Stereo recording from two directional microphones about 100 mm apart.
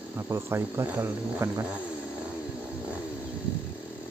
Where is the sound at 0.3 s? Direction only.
25° right (ahead or behind).